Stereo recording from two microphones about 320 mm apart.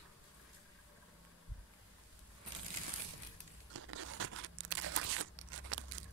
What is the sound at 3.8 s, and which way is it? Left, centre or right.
Crunch, right.